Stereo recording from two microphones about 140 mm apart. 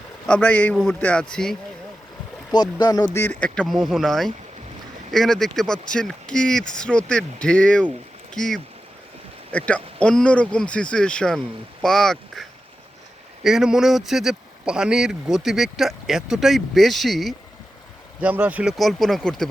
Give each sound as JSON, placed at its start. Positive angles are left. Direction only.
{"t": 0.3, "sound": "speech", "side_deg": 10}
{"t": 2.5, "sound": "speech", "side_deg": 30}
{"t": 3.1, "sound": "speech", "side_deg": 15}
{"t": 18.2, "sound": "speech", "side_deg": -10}
{"t": 18.8, "sound": "speech", "side_deg": 0}